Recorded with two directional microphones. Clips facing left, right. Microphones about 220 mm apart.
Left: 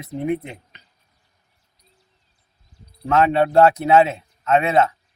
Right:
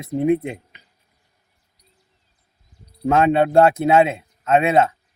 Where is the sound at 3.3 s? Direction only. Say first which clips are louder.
Even; 25° right (ahead or behind).